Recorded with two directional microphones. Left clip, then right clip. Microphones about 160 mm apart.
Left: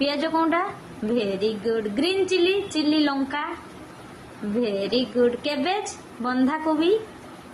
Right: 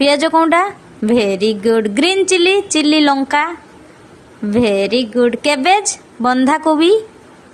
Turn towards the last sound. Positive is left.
turn(degrees=-55)  # may be behind; listen again after turning